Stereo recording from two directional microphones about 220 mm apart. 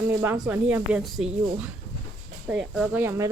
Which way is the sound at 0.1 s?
10° right (ahead or behind).